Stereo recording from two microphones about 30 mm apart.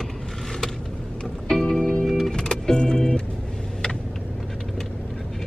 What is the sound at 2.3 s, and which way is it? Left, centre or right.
Music, left.